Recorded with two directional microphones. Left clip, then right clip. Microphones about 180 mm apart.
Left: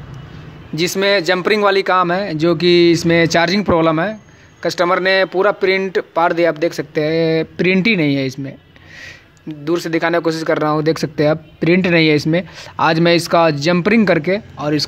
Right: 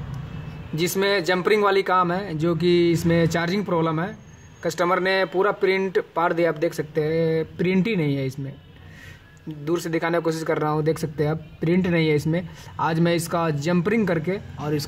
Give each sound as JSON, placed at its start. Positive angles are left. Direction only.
{"t": 0.7, "sound": "speech", "side_deg": 40}
{"t": 9.7, "sound": "speech", "side_deg": 35}